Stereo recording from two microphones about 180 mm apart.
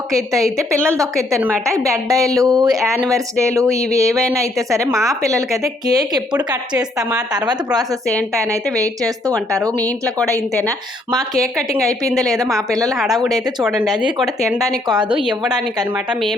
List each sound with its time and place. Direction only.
0.1 s a woman's voice: 15° right (ahead or behind)
9.5 s a woman's voice: 15° right (ahead or behind)
13.6 s speech: centre (ahead or behind)
14.8 s speech: 25° right (ahead or behind)